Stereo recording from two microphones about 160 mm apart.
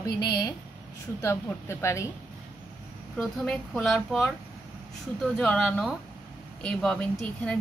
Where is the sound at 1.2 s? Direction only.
15° left (ahead or behind).